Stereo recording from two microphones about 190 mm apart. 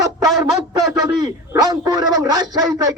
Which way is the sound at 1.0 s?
20° right (ahead or behind).